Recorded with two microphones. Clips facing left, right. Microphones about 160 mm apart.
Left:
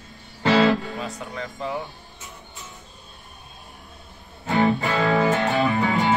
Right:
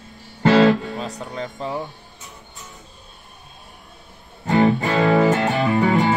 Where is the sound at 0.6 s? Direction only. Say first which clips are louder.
Right 4 dB; 40° right (ahead or behind).